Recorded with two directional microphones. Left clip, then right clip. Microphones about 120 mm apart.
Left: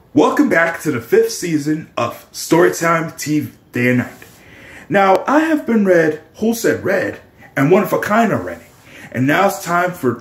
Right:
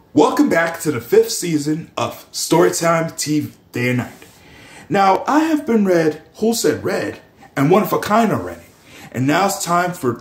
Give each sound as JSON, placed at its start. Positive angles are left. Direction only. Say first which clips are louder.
{"t": 0.2, "sound": "speech", "louder": "left 1 dB", "side_deg": -10}
{"t": 7.5, "sound": "speech", "louder": "left 1 dB", "side_deg": -20}